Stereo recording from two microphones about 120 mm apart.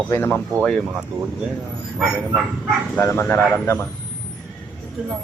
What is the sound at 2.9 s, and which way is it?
Speech, 15° left (ahead or behind).